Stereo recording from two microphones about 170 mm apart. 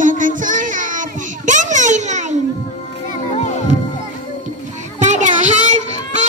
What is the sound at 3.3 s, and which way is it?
Music, 45° left (ahead or behind).